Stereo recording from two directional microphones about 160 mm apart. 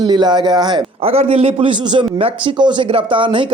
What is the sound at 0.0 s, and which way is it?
A man's voice, 30° right (ahead or behind).